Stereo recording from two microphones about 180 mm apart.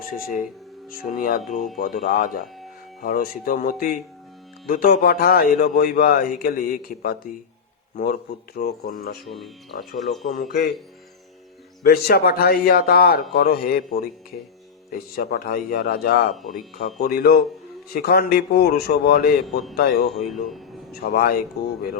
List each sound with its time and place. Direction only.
0.1 s a man's voice: 50° left (ahead or behind)
10.2 s speech: 50° left (ahead or behind)
11.8 s a man's voice: 55° left (ahead or behind)